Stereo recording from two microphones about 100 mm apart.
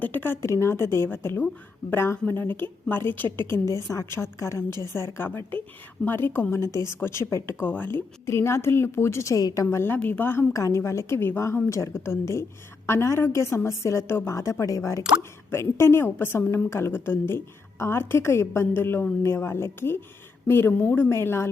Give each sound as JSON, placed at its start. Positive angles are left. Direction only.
{"t": 0.0, "sound": "speech", "side_deg": 20}
{"t": 9.6, "sound": "speech", "side_deg": 20}